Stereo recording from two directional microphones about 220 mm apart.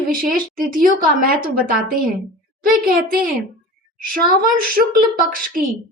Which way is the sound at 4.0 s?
40° right (ahead or behind).